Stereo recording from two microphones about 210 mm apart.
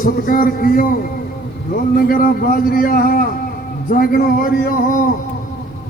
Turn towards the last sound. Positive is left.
turn(degrees=40)  # may be behind; listen again after turning